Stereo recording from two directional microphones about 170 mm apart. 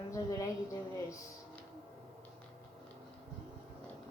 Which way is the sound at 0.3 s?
20° left (ahead or behind).